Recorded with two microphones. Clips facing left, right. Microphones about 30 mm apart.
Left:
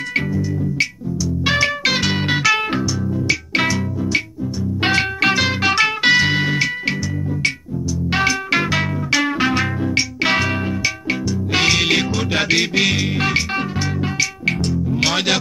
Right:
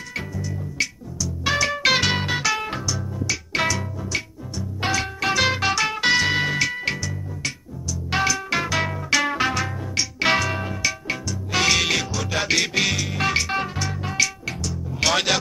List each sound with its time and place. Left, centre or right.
1.2 s music: left
1.7 s music: centre
3.3 s music: left
4.8 s music: left
5.4 s music: centre
8.1 s music: left
9.1 s music: centre
9.5 s music: left
12.0 s music: left
12.5 s music: centre
12.9 s music: left
13.2 s music: centre
14.7 s music: centre